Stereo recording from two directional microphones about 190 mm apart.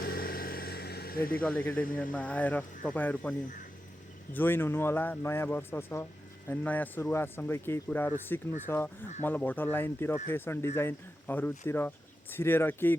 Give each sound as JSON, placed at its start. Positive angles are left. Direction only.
{"t": 0.0, "sound": "vehicle", "side_deg": 55}
{"t": 1.2, "sound": "speech", "side_deg": 10}
{"t": 4.4, "sound": "speech", "side_deg": 10}